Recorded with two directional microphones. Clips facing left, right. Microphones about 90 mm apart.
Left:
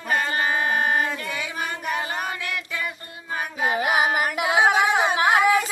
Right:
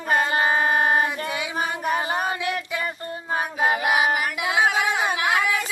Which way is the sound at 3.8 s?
35° left (ahead or behind).